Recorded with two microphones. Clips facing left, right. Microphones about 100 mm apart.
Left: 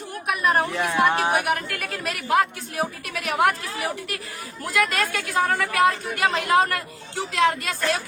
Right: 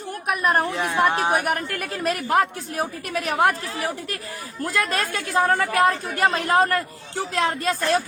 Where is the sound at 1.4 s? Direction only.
40° right (ahead or behind).